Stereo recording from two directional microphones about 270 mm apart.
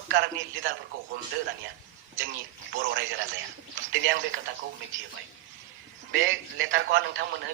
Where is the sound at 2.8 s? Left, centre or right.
Right.